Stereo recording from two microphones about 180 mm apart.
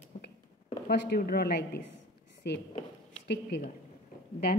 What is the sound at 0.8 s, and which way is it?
A woman's voice, 60° left (ahead or behind).